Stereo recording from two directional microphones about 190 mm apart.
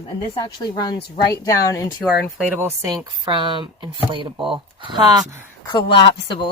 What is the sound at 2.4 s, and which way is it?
Speech, 10° right (ahead or behind).